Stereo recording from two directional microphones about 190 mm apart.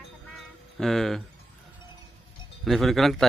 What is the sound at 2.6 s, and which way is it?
Speech, centre (ahead or behind).